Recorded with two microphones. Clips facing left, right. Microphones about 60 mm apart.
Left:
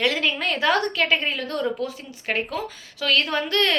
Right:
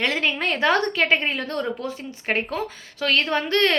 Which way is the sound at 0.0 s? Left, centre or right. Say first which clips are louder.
Even; right.